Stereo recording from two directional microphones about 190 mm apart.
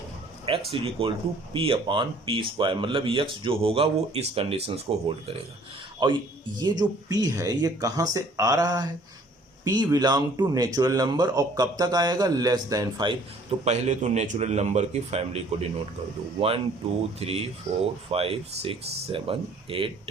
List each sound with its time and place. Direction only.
0.7 s speech: 30° right (ahead or behind)
13.7 s a man's voice: 35° right (ahead or behind)
17.2 s speech: 30° right (ahead or behind)